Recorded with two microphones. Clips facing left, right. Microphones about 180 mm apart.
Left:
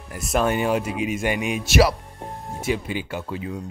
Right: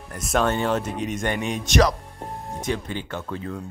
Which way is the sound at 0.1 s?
5° left (ahead or behind).